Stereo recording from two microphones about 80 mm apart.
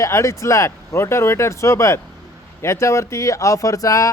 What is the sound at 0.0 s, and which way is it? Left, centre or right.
Speech, left.